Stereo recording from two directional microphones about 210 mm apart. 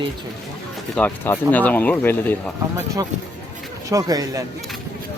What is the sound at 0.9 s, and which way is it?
Speech, 10° left (ahead or behind).